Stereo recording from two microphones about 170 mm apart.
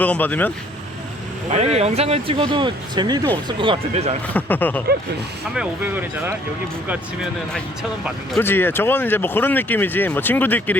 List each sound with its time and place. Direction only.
0.0 s speech: 10° left (ahead or behind)
1.5 s speech: 40° right (ahead or behind)
4.4 s speech: 10° left (ahead or behind)
5.5 s speech: 10° right (ahead or behind)
7.5 s speech: centre (ahead or behind)
8.4 s speech: 15° left (ahead or behind)